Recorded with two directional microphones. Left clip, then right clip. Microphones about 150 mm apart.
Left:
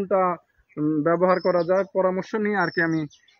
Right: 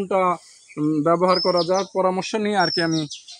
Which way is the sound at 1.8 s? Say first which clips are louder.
Right 1 dB; 30° right (ahead or behind).